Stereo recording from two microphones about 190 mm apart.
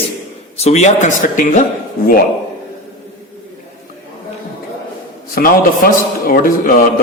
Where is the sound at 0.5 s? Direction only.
35° left (ahead or behind).